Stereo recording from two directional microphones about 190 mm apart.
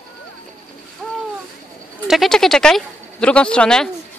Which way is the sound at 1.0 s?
5° left (ahead or behind).